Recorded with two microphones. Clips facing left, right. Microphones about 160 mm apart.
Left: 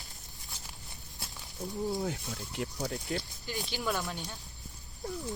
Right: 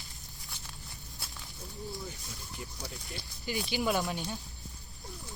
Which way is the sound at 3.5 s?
5° right (ahead or behind).